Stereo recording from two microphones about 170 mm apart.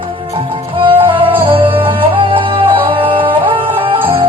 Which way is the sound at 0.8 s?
30° right (ahead or behind).